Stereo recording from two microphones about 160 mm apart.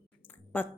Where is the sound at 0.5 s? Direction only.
10° left (ahead or behind).